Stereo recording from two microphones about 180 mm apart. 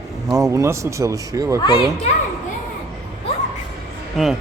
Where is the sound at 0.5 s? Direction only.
15° right (ahead or behind).